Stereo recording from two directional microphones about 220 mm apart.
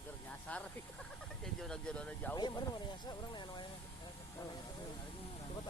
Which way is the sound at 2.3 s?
20° left (ahead or behind).